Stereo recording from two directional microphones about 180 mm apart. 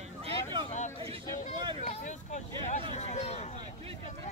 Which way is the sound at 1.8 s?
40° left (ahead or behind).